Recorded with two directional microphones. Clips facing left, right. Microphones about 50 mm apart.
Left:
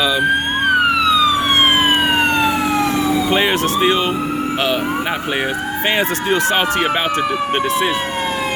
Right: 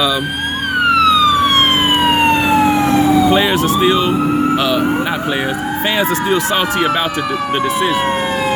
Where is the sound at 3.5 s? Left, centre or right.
Left.